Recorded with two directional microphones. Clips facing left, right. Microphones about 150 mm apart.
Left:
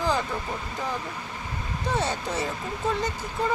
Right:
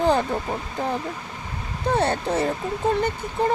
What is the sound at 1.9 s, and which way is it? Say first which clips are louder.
Speech: right 6 dB; 55° right (ahead or behind).